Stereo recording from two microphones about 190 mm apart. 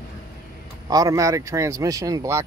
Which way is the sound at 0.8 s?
20° right (ahead or behind).